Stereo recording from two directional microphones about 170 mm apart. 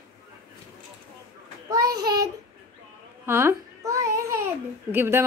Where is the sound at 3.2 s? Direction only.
15° right (ahead or behind).